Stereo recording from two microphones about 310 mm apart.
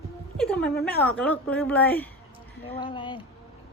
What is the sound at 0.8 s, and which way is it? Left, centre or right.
A woman's voice, centre.